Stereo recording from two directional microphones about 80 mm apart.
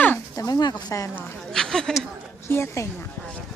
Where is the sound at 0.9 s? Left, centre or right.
Left.